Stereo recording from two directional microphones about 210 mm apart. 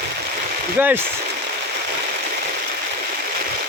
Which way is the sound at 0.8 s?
10° right (ahead or behind).